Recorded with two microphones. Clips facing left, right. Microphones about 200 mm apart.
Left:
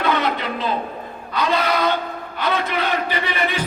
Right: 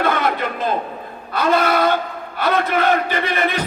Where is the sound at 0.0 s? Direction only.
50° right (ahead or behind).